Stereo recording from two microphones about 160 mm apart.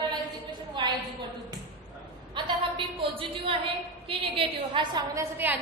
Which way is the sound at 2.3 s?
35° right (ahead or behind).